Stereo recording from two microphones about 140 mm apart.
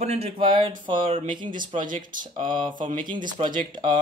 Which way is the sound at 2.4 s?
35° right (ahead or behind).